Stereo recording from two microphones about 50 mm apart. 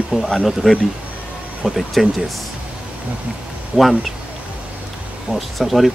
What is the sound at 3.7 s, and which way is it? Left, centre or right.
Speech, centre.